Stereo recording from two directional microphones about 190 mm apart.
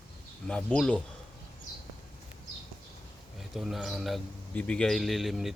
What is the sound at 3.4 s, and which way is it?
A man's voice, centre (ahead or behind).